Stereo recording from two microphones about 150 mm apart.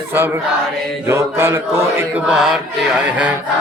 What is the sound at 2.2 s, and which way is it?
Chant, 5° right (ahead or behind).